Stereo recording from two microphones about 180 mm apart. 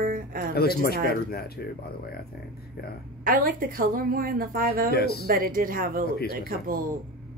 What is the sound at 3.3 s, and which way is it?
Speech, 50° right (ahead or behind).